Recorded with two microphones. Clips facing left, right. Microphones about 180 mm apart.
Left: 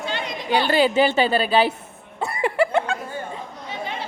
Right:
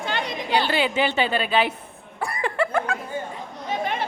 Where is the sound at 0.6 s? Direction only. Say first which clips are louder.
Left 5 dB; 40° left (ahead or behind).